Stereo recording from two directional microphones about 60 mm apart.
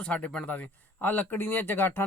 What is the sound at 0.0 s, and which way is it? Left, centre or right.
Speech, left.